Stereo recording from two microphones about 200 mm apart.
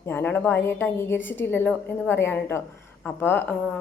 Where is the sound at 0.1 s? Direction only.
10° left (ahead or behind).